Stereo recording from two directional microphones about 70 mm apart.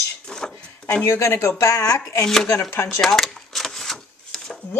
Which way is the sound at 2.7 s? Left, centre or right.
Left.